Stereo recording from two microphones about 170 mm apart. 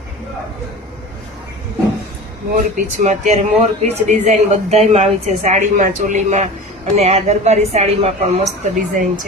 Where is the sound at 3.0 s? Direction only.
45° right (ahead or behind).